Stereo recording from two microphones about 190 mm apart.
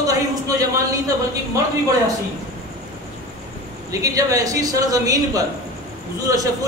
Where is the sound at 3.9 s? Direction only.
15° right (ahead or behind).